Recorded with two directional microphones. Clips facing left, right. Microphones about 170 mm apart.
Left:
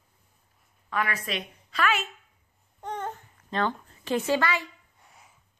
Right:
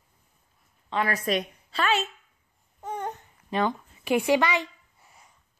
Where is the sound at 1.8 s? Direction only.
30° right (ahead or behind).